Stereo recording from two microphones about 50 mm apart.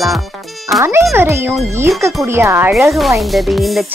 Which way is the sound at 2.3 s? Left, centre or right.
Right.